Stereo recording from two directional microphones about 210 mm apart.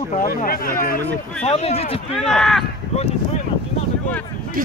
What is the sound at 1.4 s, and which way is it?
Speech, 30° left (ahead or behind).